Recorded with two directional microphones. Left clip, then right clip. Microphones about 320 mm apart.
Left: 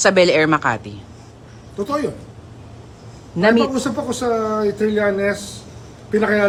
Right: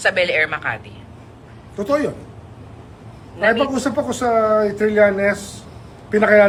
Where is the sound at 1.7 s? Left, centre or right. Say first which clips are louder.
Right 3 dB; centre.